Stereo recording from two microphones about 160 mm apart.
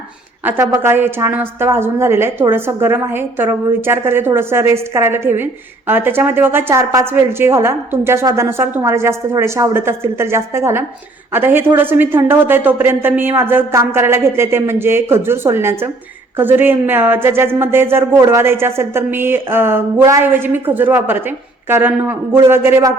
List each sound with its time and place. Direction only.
0.4 s speech: 15° right (ahead or behind)